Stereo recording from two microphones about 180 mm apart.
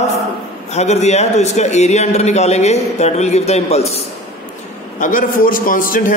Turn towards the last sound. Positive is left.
turn(degrees=50)  # may be behind; listen again after turning